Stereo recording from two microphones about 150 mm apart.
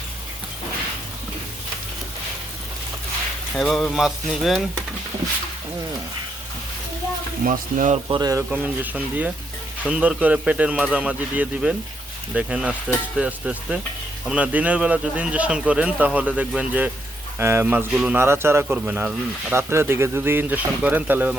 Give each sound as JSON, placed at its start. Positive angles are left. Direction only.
{"t": 3.5, "sound": "speech", "side_deg": 0}
{"t": 7.4, "sound": "speech", "side_deg": -60}
{"t": 8.0, "sound": "speech", "side_deg": -30}
{"t": 8.4, "sound": "speech", "side_deg": -10}
{"t": 18.2, "sound": "speech", "side_deg": -15}